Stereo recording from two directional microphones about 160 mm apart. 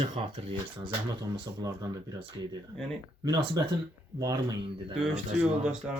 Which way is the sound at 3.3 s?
25° right (ahead or behind).